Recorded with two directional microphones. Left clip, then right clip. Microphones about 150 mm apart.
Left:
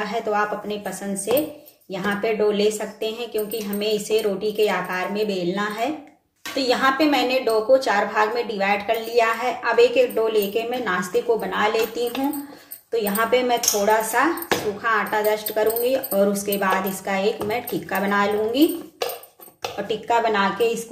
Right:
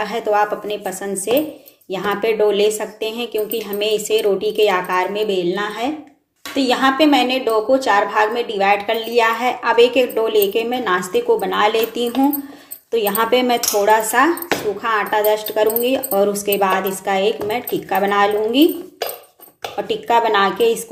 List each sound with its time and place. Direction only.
0.0 s a woman's voice: 40° right (ahead or behind)
19.9 s a woman's voice: 40° right (ahead or behind)